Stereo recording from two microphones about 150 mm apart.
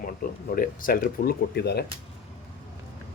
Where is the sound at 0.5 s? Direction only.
70° left (ahead or behind); by 1.8 s 90° left.